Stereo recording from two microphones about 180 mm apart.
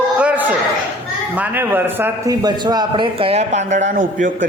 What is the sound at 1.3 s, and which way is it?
A man's voice, 10° right (ahead or behind).